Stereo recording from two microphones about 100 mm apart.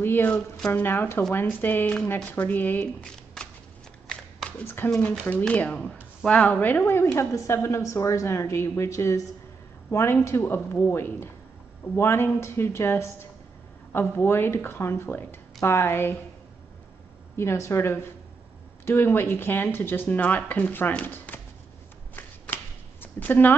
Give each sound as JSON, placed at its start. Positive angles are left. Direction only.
{"t": 0.0, "sound": "a sound", "side_deg": 20}
{"t": 0.7, "sound": "speech", "side_deg": 20}
{"t": 3.4, "sound": "shuffling cards", "side_deg": 5}
{"t": 4.5, "sound": "speech", "side_deg": 20}
{"t": 17.4, "sound": "speech", "side_deg": 25}
{"t": 22.1, "sound": "shuffling cards", "side_deg": 20}